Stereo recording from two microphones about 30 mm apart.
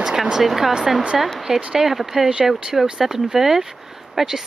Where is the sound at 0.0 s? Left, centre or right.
Centre.